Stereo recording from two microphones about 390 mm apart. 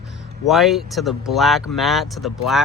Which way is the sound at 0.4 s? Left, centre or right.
Centre.